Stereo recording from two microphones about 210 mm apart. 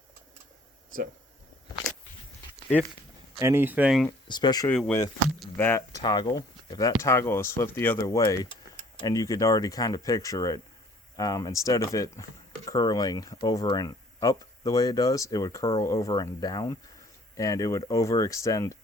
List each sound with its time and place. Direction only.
3.4 s speech: 10° right (ahead or behind)
4.3 s speech: 20° left (ahead or behind)
4.7 s speech: 5° left (ahead or behind)